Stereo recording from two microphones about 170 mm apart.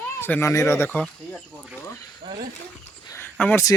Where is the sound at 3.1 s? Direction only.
10° left (ahead or behind).